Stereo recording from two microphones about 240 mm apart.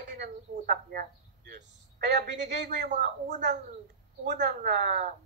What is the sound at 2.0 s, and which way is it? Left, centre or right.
Speech, right.